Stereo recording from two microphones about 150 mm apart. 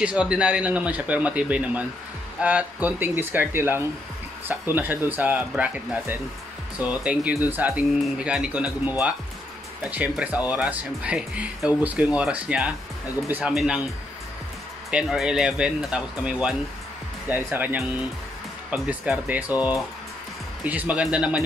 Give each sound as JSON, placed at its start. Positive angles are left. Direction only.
{"t": 0.0, "sound": "speech", "side_deg": -5}
{"t": 14.9, "sound": "speech", "side_deg": -5}
{"t": 20.6, "sound": "speech", "side_deg": -10}